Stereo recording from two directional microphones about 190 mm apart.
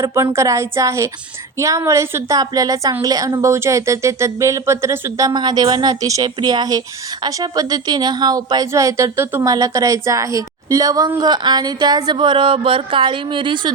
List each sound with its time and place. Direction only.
0.0 s a woman's voice: 15° right (ahead or behind)